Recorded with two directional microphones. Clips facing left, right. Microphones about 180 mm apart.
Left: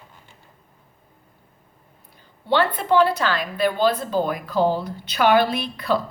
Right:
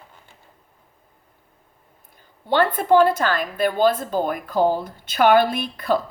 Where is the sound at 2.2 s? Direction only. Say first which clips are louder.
Right 1 dB; 50° right (ahead or behind).